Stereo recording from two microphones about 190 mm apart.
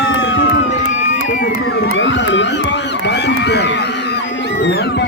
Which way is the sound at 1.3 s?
60° left (ahead or behind).